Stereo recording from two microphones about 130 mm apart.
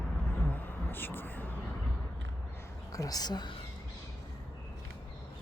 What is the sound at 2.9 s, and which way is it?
Speech, 25° left (ahead or behind).